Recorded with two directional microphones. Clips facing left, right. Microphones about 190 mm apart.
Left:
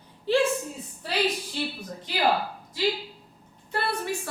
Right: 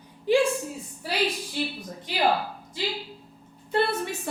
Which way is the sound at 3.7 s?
20° right (ahead or behind).